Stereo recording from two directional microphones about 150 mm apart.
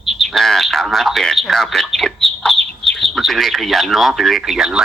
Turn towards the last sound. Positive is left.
turn(degrees=0)  # may be behind; listen again after turning